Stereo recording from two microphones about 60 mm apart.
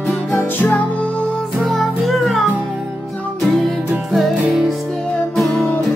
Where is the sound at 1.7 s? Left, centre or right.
Centre.